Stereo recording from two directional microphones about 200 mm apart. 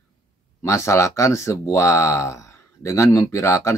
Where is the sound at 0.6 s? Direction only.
15° left (ahead or behind).